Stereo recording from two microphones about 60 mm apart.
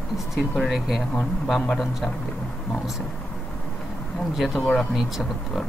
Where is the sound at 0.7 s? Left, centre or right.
Centre.